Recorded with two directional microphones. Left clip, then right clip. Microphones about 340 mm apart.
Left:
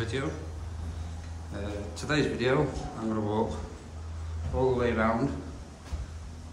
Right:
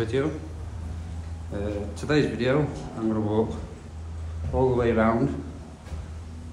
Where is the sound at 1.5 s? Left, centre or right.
Centre.